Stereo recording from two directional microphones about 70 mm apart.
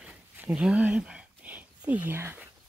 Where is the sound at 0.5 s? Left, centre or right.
Centre.